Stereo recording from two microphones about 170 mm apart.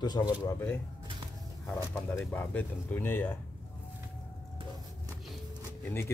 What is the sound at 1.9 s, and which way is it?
Speech, 10° left (ahead or behind).